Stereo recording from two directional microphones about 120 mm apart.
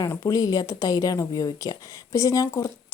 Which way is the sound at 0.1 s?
30° left (ahead or behind).